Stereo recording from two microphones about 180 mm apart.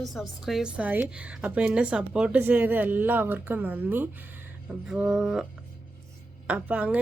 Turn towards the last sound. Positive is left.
turn(degrees=-5)  # may be behind; listen again after turning